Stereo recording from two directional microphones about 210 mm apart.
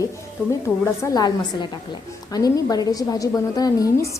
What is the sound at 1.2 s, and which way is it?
A woman's voice, 20° left (ahead or behind).